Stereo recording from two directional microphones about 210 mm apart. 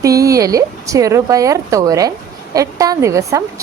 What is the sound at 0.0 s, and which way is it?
Speech, 15° right (ahead or behind).